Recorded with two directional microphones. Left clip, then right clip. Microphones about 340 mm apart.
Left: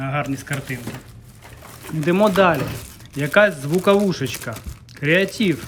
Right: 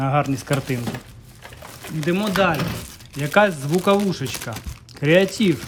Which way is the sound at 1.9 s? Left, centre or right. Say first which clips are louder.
Left 5 dB; centre.